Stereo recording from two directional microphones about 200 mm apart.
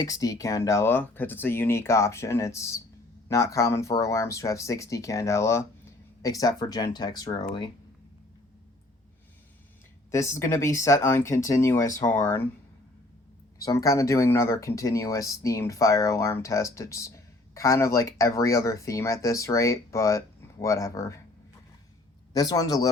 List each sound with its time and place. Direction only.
0.0 s speech: 15° left (ahead or behind)
10.1 s speech: 15° left (ahead or behind)
13.6 s speech: 15° left (ahead or behind)
22.3 s a man's voice: 20° left (ahead or behind)